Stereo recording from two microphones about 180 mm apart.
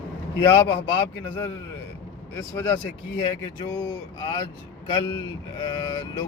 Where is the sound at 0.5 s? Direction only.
15° left (ahead or behind).